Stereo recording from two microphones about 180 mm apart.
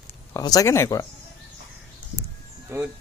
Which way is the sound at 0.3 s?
20° left (ahead or behind).